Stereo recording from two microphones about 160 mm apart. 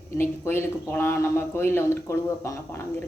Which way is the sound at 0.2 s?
15° left (ahead or behind).